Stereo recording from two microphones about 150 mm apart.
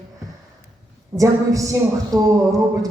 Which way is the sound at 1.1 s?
20° right (ahead or behind).